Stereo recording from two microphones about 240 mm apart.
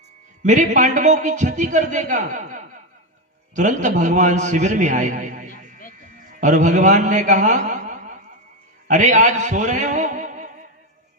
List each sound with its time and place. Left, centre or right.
0.4 s a man's voice: right